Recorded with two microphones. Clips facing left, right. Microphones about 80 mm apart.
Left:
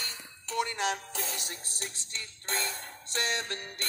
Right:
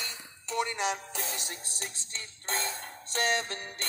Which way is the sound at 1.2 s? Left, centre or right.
Right.